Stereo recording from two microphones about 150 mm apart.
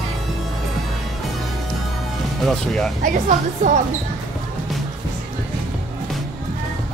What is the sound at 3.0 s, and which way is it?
Speech, 60° right (ahead or behind).